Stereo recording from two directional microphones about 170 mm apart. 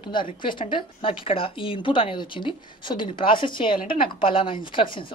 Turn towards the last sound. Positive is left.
turn(degrees=30)  # may be behind; listen again after turning